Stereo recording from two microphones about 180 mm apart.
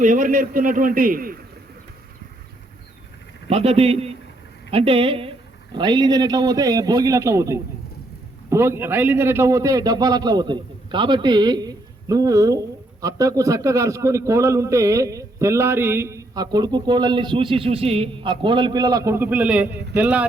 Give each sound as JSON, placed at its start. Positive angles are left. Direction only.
{"t": 0.0, "sound": "a man's voice", "side_deg": -45}
{"t": 3.5, "sound": "a man's voice", "side_deg": -35}